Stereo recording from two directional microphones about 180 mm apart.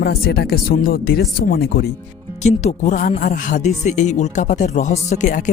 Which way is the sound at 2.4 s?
40° left (ahead or behind).